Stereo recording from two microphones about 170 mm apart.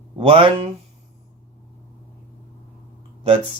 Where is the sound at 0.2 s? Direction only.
30° right (ahead or behind).